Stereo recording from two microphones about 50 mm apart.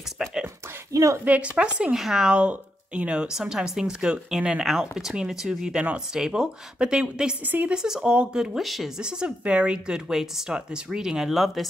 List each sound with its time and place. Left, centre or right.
1.2 s a woman's voice: right
1.9 s a woman's voice: centre
2.3 s speech: right
3.3 s a woman's voice: centre
4.6 s a woman's voice: centre
7.4 s a woman's voice: right
7.7 s a woman's voice: centre
8.5 s speech: centre
8.9 s a woman's voice: centre